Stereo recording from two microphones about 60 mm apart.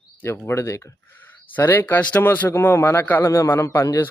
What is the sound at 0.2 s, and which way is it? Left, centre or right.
Speech, left.